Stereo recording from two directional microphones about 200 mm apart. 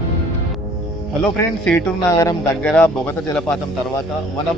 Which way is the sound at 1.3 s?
5° left (ahead or behind).